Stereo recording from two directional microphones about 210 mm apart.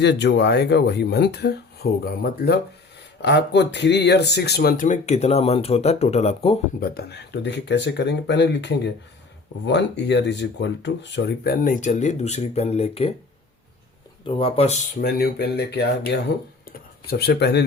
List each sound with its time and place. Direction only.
0.0 s speech: 55° left (ahead or behind); by 6.6 s 30° left (ahead or behind)
6.7 s speech: 45° left (ahead or behind); by 13.1 s 30° left (ahead or behind)
14.3 s speech: 25° left (ahead or behind)
15.0 s speech: 50° left (ahead or behind)